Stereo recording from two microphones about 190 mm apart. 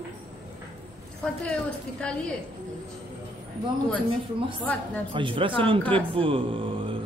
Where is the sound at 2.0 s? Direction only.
5° left (ahead or behind).